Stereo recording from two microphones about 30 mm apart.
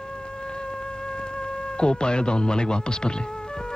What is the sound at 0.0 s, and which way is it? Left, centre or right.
Music, left.